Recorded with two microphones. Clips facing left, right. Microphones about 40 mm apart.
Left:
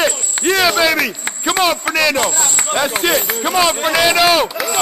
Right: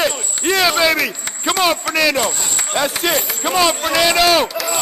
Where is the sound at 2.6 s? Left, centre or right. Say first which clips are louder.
Left 5 dB; left.